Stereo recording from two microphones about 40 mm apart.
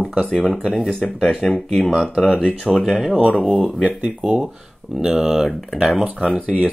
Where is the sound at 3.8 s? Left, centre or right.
Right.